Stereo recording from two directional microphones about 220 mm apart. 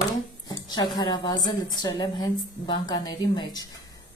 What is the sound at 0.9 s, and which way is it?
A woman's voice, 20° left (ahead or behind).